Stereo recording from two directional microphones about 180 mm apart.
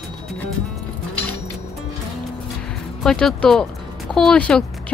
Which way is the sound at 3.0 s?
5° left (ahead or behind).